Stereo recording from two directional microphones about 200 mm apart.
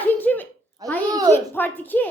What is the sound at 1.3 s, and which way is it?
Speech, 10° left (ahead or behind).